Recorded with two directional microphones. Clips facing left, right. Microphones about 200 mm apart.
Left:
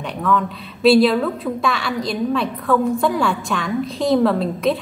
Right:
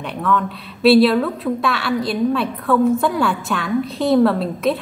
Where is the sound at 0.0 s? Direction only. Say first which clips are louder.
Even; centre (ahead or behind).